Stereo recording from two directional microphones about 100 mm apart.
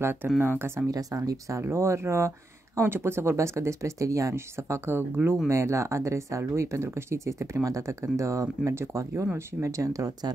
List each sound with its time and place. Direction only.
0.0 s speech: 25° right (ahead or behind)
0.8 s speech: 35° right (ahead or behind)